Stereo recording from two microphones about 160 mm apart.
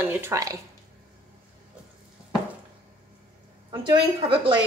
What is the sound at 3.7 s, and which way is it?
Speech, 30° right (ahead or behind).